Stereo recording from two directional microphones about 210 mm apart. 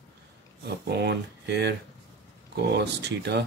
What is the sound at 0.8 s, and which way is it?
Speech, 55° right (ahead or behind).